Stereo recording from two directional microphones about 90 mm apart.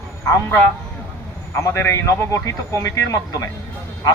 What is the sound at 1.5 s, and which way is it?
Speech, 30° left (ahead or behind).